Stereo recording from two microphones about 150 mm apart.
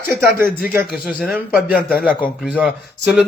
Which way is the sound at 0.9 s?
Centre (ahead or behind).